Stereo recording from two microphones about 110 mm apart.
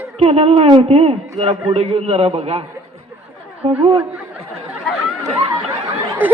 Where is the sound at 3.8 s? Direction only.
45° right (ahead or behind).